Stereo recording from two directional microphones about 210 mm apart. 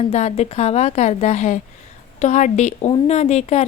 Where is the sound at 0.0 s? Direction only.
30° left (ahead or behind).